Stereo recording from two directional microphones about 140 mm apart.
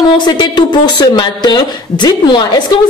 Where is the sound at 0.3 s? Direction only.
30° left (ahead or behind).